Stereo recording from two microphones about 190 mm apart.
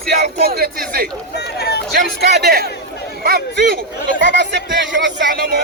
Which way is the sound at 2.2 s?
60° right (ahead or behind).